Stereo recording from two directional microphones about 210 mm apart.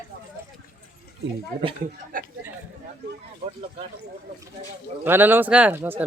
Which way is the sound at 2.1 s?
40° right (ahead or behind).